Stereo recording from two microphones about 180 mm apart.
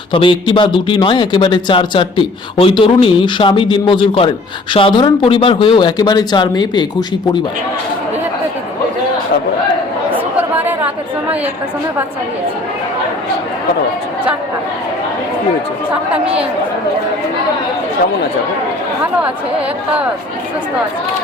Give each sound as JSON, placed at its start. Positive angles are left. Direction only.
{"t": 0.1, "sound": "speech", "side_deg": 30}